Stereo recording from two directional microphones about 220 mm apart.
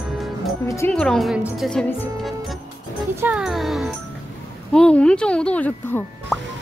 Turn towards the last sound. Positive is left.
turn(degrees=5)  # may be behind; listen again after turning